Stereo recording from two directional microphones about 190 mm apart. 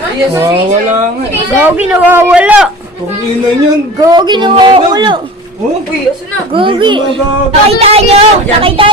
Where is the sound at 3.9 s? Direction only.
20° right (ahead or behind).